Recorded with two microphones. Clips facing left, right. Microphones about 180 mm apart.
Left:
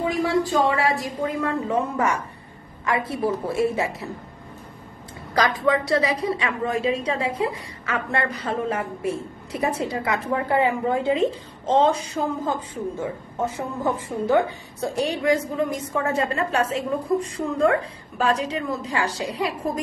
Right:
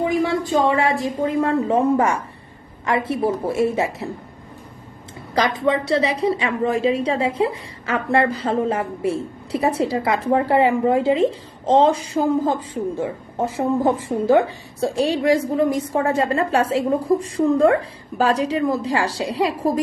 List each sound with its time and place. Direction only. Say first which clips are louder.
0.5 s a woman's voice: right 3 dB; 25° right (ahead or behind)
5.3 s a woman's voice: right 1 dB; 25° right (ahead or behind)